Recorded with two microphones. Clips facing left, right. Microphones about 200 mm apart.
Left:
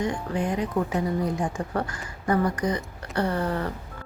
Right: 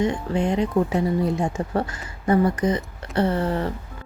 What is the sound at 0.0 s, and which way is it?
A woman's voice, 25° right (ahead or behind).